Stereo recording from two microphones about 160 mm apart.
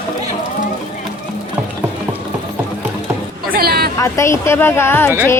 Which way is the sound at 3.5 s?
70° right (ahead or behind).